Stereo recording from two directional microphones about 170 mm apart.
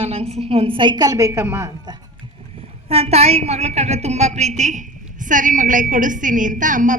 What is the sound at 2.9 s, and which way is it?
A woman's voice, 40° right (ahead or behind).